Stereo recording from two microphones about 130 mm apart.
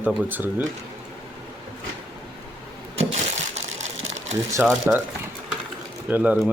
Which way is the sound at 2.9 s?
60° right (ahead or behind).